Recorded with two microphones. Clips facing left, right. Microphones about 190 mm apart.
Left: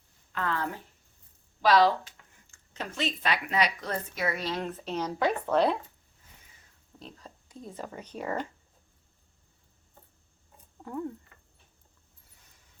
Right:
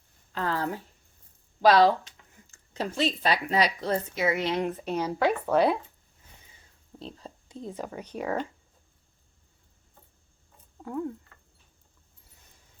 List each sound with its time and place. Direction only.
0.3 s speech: 35° right (ahead or behind); by 5.7 s 10° right (ahead or behind)
7.0 s speech: 30° right (ahead or behind)
7.9 s speech: 10° right (ahead or behind)